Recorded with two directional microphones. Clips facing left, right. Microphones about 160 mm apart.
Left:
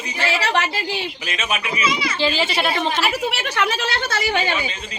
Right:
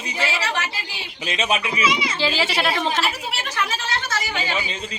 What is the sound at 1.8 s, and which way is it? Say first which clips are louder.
Speech: even; 15° right (ahead or behind).